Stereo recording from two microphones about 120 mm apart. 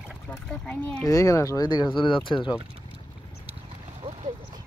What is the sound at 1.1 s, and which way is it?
Speech, 25° left (ahead or behind).